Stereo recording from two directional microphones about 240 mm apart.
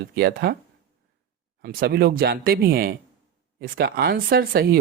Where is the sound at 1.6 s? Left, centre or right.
Right.